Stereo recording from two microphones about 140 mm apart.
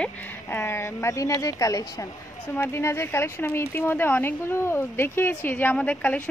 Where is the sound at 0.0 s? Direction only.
15° left (ahead or behind).